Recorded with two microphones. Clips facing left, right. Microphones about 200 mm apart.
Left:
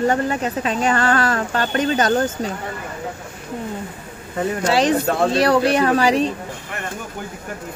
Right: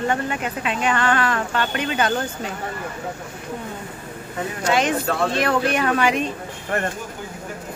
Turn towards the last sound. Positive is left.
turn(degrees=35)  # may be behind; listen again after turning